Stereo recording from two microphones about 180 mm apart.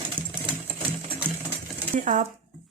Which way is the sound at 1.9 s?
45° right (ahead or behind).